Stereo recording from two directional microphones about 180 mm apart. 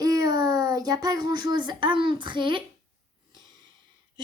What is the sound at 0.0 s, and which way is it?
A child's voice, 20° right (ahead or behind).